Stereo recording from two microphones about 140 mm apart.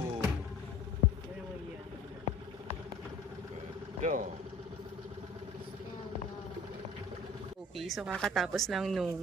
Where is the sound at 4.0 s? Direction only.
65° right (ahead or behind).